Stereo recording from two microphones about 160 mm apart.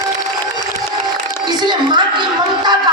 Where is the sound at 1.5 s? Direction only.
25° right (ahead or behind).